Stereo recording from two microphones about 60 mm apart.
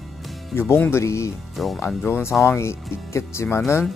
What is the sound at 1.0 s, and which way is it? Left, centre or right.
Speech, left.